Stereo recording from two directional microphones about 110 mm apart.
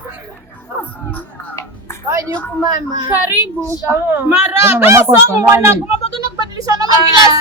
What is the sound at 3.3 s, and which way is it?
A woman's voice, 20° right (ahead or behind).